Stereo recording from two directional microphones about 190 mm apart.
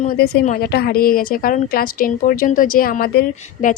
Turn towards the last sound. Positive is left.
turn(degrees=50)  # may be behind; listen again after turning